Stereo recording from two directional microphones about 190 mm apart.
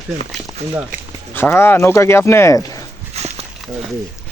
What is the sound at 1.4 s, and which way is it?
Speech, 15° left (ahead or behind).